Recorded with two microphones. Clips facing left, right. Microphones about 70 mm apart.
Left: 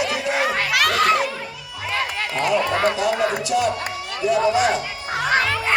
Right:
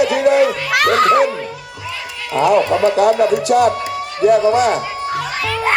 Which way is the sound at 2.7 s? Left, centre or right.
Left.